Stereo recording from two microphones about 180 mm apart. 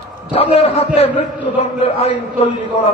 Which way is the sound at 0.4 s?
35° left (ahead or behind).